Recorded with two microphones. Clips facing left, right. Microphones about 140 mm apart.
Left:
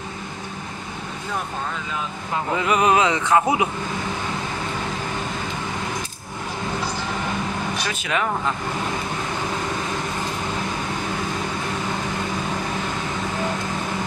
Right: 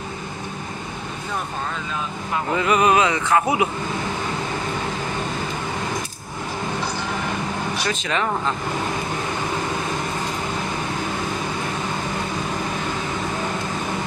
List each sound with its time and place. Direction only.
2.5 s speech: 15° left (ahead or behind)
7.9 s speech: 10° left (ahead or behind)